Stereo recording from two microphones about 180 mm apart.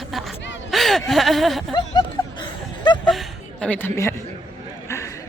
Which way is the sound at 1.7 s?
25° left (ahead or behind).